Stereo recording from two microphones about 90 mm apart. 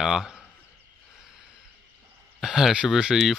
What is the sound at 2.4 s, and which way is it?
Speech, 5° right (ahead or behind).